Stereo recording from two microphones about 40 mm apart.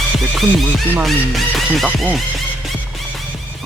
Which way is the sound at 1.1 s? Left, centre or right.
Centre.